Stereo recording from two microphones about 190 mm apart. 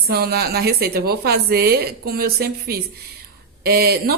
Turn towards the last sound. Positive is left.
turn(degrees=-55)  # may be behind; listen again after turning